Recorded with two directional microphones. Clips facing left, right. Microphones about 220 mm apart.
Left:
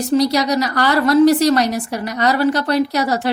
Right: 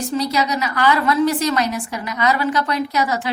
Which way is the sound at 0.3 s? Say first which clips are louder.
Left 4 dB; 35° left (ahead or behind).